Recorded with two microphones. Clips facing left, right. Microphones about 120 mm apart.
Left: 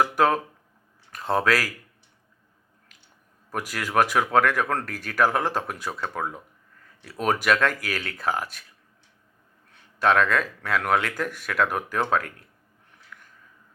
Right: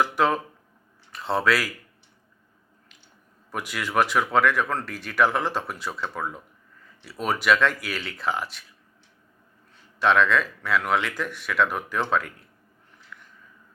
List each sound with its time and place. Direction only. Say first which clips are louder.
0.0 s speech: left 1 dB; 45° left (ahead or behind)
3.5 s speech: left 1 dB; 40° left (ahead or behind)
9.7 s speech: even; 45° left (ahead or behind)
13.1 s a sound: right 1 dB; 45° left (ahead or behind)